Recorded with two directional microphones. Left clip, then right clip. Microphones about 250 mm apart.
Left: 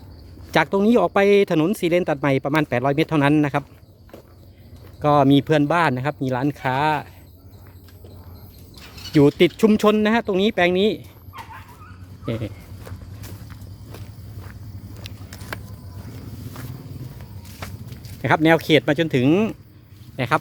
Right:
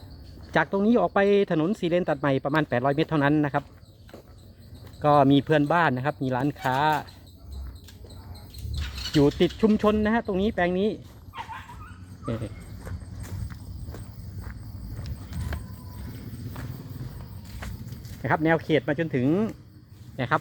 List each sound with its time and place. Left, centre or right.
0.5 s speech: centre
5.0 s speech: centre
8.7 s cricket: right
9.1 s speech: centre
12.2 s speech: centre
12.8 s clip-clop: centre
18.2 s speech: left